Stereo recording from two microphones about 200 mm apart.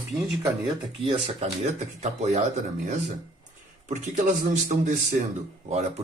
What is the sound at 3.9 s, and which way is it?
Speech, 35° right (ahead or behind).